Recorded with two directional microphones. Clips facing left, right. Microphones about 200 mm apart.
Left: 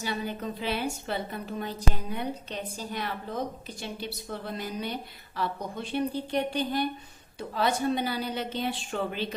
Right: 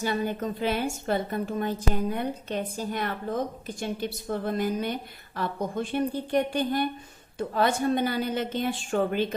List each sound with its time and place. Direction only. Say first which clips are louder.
0.0 s a woman's voice: right 5 dB; 50° right (ahead or behind)